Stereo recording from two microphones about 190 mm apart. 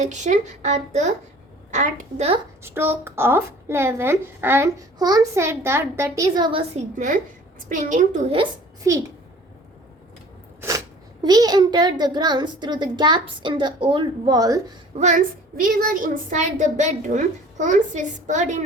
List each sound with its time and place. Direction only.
0.0 s a woman's voice: 40° right (ahead or behind)
2.6 s a woman's voice: 10° right (ahead or behind)
7.7 s a woman's voice: 40° right (ahead or behind)
8.4 s a woman's voice: 15° right (ahead or behind)
10.6 s a child's voice: 20° right (ahead or behind)
14.9 s a woman's voice: 40° right (ahead or behind)